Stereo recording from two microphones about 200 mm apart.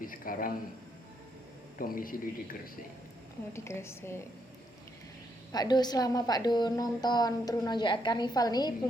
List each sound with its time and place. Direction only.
0.0 s a man's voice: 45° left (ahead or behind)
1.8 s a man's voice: 45° left (ahead or behind)
3.5 s a woman's voice: 15° left (ahead or behind)
5.5 s a woman's voice: 20° left (ahead or behind)